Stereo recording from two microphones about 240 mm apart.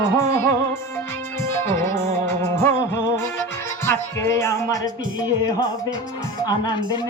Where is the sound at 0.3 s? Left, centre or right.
Centre.